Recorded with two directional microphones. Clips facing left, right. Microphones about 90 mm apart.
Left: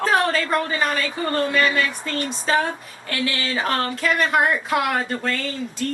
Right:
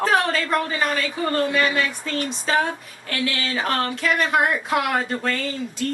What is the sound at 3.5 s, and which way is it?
A woman's voice, centre (ahead or behind).